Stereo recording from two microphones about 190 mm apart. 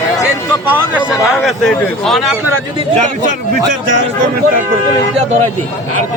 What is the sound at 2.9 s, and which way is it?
Speech, 40° right (ahead or behind).